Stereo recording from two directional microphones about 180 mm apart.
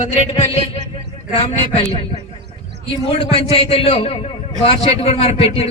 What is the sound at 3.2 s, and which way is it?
A man's voice, 35° left (ahead or behind).